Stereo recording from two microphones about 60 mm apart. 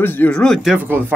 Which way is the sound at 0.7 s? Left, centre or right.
Right.